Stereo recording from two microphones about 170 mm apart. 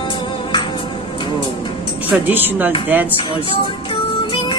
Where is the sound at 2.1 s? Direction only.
10° right (ahead or behind).